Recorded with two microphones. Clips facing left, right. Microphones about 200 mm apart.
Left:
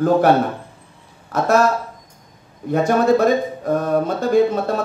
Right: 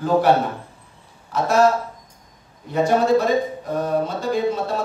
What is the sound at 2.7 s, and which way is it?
Speech, 50° left (ahead or behind).